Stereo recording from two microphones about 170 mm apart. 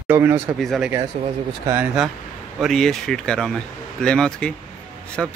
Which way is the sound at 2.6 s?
Centre (ahead or behind).